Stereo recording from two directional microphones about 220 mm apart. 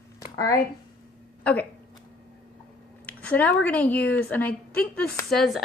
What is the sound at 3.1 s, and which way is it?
A woman's voice, 5° left (ahead or behind).